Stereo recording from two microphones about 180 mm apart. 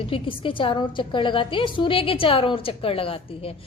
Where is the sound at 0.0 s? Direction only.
30° left (ahead or behind).